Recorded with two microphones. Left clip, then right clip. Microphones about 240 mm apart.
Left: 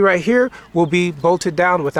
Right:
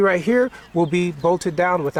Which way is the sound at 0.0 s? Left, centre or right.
Centre.